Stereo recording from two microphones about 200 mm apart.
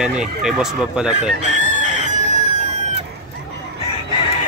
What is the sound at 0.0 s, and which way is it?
Speech, 5° right (ahead or behind).